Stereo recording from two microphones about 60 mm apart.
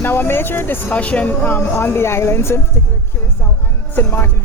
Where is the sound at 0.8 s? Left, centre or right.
Left.